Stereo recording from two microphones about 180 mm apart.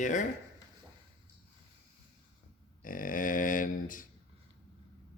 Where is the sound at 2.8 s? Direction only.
50° left (ahead or behind).